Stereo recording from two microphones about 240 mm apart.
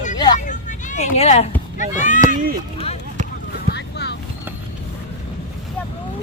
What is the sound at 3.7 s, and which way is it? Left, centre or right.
Vehicle, left.